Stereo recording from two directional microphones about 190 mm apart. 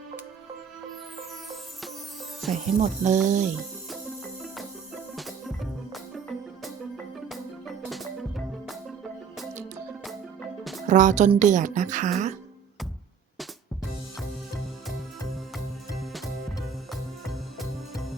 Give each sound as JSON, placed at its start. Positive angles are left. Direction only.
{"t": 2.5, "sound": "speech", "side_deg": -40}
{"t": 4.5, "sound": "music", "side_deg": 0}
{"t": 10.6, "sound": "music", "side_deg": 0}
{"t": 10.8, "sound": "speech", "side_deg": -40}
{"t": 16.1, "sound": "music", "side_deg": 0}